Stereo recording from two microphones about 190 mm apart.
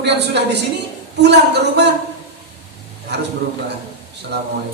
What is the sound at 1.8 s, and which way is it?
Speech, 60° right (ahead or behind).